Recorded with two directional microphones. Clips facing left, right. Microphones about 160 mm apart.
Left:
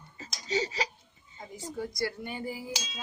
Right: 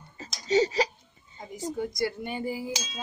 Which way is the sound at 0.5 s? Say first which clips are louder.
Right 8 dB; 35° right (ahead or behind).